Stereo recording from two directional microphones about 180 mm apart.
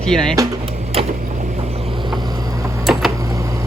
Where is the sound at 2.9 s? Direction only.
Centre (ahead or behind).